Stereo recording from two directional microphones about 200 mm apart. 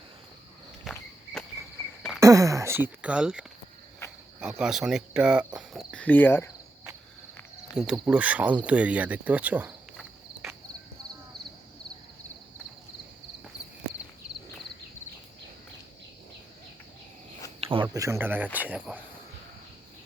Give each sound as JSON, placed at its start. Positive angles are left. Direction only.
{"t": 0.9, "sound": "cricket", "side_deg": 5}
{"t": 2.2, "sound": "speech", "side_deg": -15}
{"t": 4.0, "sound": "cricket", "side_deg": 15}
{"t": 4.4, "sound": "speech", "side_deg": -5}
{"t": 7.8, "sound": "speech", "side_deg": -5}
{"t": 17.6, "sound": "speech", "side_deg": -25}